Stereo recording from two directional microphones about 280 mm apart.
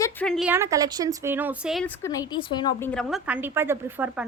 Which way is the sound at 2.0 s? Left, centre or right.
Centre.